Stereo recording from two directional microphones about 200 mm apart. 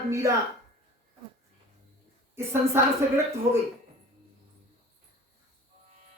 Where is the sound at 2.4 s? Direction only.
10° right (ahead or behind).